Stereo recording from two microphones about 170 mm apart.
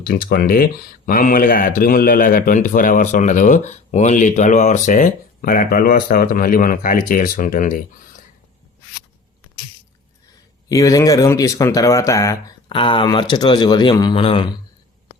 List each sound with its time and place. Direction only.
0.0 s speech: 60° left (ahead or behind)
10.7 s speech: 20° left (ahead or behind)